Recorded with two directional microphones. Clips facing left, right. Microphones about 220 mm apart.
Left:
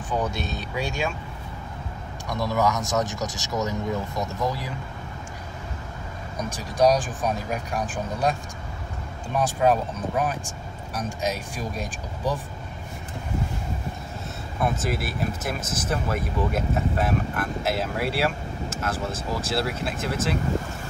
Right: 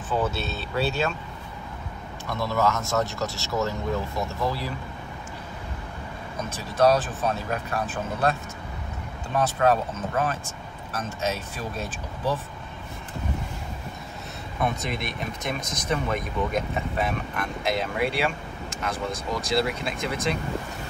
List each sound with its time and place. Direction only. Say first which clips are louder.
0.1 s speech: right 1 dB; 15° left (ahead or behind)
2.2 s speech: left 1 dB; 15° left (ahead or behind)
6.5 s speech: even; 15° left (ahead or behind)
14.6 s speech: left 2 dB; 5° left (ahead or behind)